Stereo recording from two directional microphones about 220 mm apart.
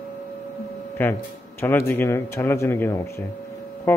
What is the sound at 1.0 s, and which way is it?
A man's voice, 10° left (ahead or behind).